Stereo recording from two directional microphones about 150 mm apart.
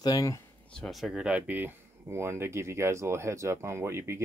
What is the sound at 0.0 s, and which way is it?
Speech, 25° left (ahead or behind).